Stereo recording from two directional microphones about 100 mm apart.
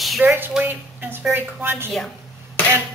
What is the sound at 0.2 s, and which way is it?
A woman's voice, 20° right (ahead or behind).